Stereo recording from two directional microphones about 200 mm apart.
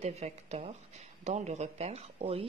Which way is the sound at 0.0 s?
30° right (ahead or behind).